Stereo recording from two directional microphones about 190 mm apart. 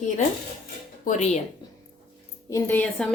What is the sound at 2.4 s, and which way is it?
Speech, 15° left (ahead or behind).